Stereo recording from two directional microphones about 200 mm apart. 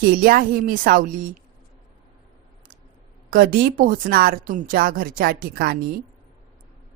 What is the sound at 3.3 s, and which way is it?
A woman's voice, 45° right (ahead or behind).